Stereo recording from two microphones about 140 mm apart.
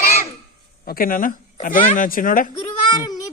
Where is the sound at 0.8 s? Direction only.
90° left.